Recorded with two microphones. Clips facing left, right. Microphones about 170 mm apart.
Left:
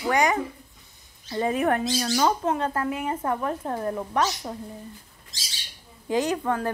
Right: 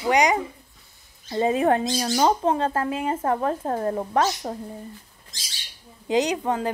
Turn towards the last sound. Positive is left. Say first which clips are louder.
# right 1 dB
turn(degrees=-20)  # may be behind; listen again after turning